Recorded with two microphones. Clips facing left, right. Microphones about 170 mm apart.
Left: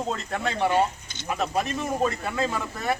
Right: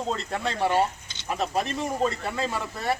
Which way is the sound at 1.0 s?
50° left (ahead or behind).